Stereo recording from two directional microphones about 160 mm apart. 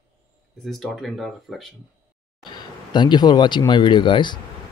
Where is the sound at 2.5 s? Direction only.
30° left (ahead or behind).